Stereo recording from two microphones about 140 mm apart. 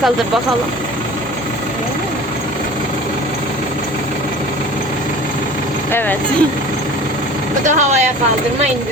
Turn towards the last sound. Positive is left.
turn(degrees=-60)  # may be behind; listen again after turning